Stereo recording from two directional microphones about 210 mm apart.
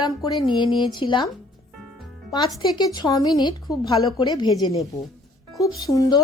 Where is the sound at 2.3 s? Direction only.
20° left (ahead or behind).